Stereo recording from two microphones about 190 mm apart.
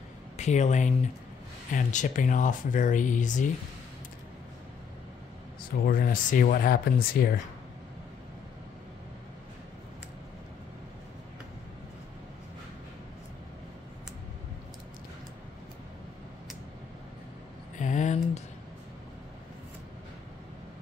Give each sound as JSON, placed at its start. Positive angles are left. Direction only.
{"t": 0.4, "sound": "speech", "side_deg": 40}
{"t": 5.6, "sound": "speech", "side_deg": 50}
{"t": 17.7, "sound": "a sound", "side_deg": 40}